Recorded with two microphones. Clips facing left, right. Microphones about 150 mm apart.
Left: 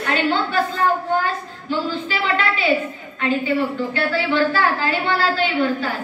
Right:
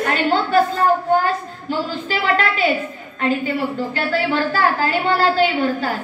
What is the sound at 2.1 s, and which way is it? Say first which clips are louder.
Speech: right 6 dB; 40° right (ahead or behind).